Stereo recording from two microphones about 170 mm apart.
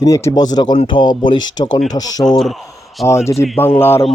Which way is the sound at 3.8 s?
15° left (ahead or behind).